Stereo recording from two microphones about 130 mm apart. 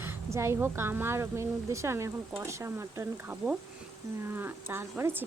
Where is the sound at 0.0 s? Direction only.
20° right (ahead or behind).